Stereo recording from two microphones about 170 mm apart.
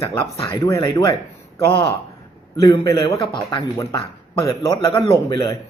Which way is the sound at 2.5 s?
20° left (ahead or behind).